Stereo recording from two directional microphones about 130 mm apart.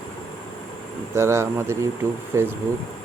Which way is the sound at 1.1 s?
20° right (ahead or behind).